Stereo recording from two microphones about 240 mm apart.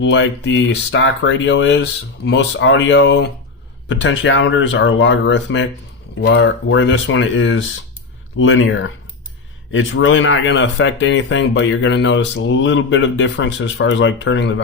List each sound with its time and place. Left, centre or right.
0.0 s speech: left